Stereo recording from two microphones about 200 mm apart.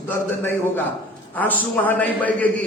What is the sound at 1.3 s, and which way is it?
A man's voice, 10° left (ahead or behind).